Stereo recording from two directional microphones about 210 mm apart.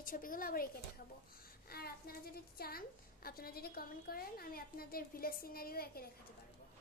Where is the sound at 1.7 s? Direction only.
45° left (ahead or behind).